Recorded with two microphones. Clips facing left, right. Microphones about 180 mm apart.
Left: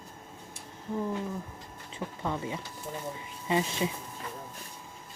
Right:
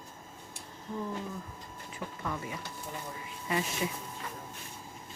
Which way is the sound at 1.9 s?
25° left (ahead or behind).